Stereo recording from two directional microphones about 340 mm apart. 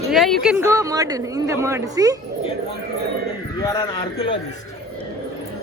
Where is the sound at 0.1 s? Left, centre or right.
Centre.